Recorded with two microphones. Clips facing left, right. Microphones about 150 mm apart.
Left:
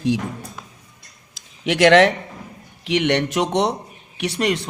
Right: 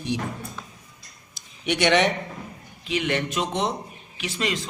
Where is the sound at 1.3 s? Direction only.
90° left.